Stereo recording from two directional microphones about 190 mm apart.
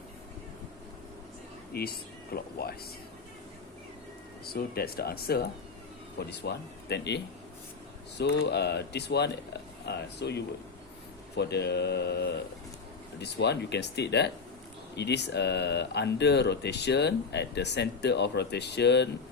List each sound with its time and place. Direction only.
1.7 s speech: 55° left (ahead or behind)
4.4 s speech: 55° left (ahead or behind)
8.2 s speech: 60° left (ahead or behind)